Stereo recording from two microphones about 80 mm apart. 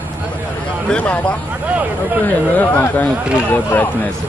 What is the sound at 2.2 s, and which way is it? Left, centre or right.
Speech, left.